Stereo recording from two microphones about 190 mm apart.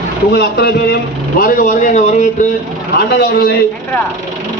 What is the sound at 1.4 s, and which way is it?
Speech, 45° left (ahead or behind).